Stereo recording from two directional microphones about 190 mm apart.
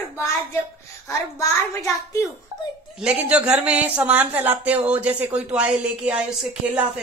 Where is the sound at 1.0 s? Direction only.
15° left (ahead or behind).